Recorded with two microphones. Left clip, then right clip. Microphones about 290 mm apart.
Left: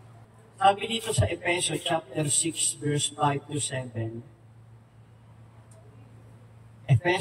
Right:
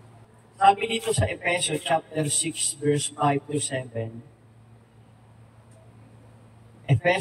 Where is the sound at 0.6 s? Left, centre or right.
Centre.